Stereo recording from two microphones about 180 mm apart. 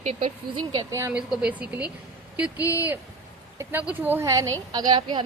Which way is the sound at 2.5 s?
20° left (ahead or behind).